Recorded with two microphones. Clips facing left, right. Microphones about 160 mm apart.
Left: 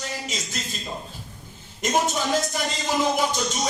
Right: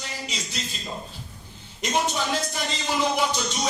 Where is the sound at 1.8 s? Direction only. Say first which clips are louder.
Left 2 dB; 45° left (ahead or behind).